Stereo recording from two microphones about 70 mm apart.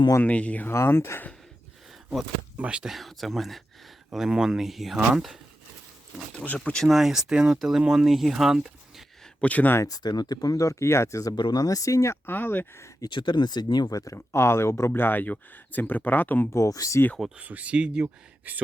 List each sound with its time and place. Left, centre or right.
0.2 s speech: centre
0.7 s speech: left
2.6 s speech: centre
2.9 s speech: centre
6.4 s speech: centre
6.8 s speech: centre
9.4 s speech: left
9.8 s speech: left
11.3 s speech: left
12.2 s speech: left
13.0 s speech: left
14.3 s speech: left
16.5 s speech: left
17.3 s speech: centre